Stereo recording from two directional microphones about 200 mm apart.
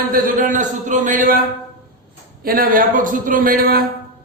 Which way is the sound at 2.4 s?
45° right (ahead or behind).